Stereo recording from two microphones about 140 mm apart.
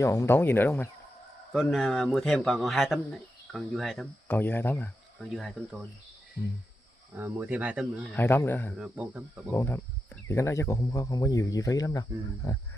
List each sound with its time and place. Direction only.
0.0 s speech: 20° left (ahead or behind)
1.5 s speech: centre (ahead or behind)
4.3 s speech: 15° left (ahead or behind)
5.2 s speech: centre (ahead or behind)
7.2 s speech: 15° right (ahead or behind)
8.1 s speech: 15° left (ahead or behind)
8.7 s speech: 5° right (ahead or behind)
9.5 s speech: 15° left (ahead or behind)